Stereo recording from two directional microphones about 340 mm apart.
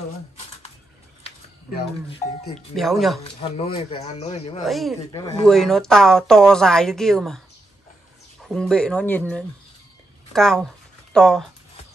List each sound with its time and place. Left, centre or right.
2.7 s a woman's voice: centre
3.3 s speech: centre
4.6 s a woman's voice: centre
10.3 s a woman's voice: centre